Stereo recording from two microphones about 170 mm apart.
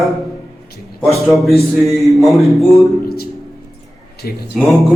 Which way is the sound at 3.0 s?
65° left (ahead or behind).